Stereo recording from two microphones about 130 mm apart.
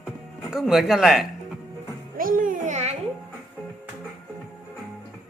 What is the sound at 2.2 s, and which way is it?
Babbling, 90° right.